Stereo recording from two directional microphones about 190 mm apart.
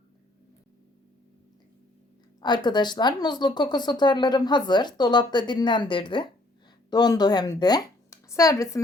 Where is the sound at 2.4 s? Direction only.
25° left (ahead or behind).